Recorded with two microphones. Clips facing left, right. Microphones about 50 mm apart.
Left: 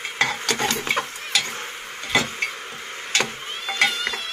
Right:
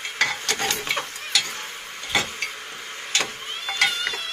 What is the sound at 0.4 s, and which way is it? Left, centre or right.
Stir, left.